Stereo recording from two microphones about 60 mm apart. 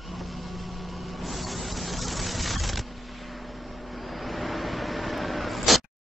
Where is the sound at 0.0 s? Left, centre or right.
Centre.